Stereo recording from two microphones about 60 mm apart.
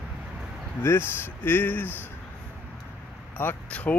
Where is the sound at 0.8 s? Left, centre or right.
Left.